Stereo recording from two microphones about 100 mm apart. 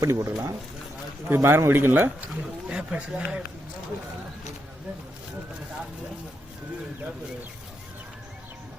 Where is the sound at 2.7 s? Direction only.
10° right (ahead or behind).